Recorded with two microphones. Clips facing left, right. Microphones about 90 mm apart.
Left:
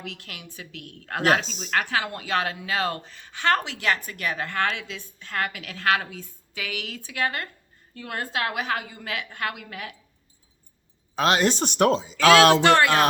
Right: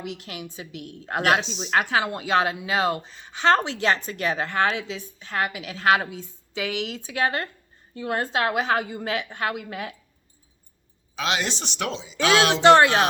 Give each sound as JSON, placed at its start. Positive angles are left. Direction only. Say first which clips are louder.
{"t": 0.0, "sound": "a woman's voice", "louder": "right 5 dB", "side_deg": -20}
{"t": 1.2, "sound": "speech", "louder": "even", "side_deg": 40}
{"t": 1.7, "sound": "a woman's voice", "louder": "right 3 dB", "side_deg": -20}
{"t": 11.1, "sound": "speech", "louder": "left 5 dB", "side_deg": 45}
{"t": 12.6, "sound": "a woman's voice", "louder": "right 4 dB", "side_deg": -25}